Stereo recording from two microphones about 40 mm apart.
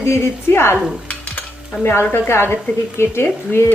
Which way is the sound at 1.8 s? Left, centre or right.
Left.